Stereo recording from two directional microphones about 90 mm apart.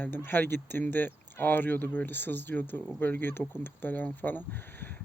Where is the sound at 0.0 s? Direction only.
20° left (ahead or behind).